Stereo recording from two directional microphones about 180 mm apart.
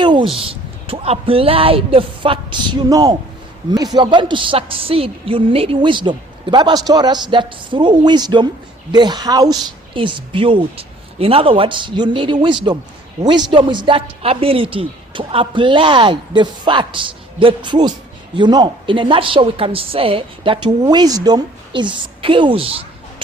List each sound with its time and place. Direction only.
0.0 s a woman's voice: 25° right (ahead or behind)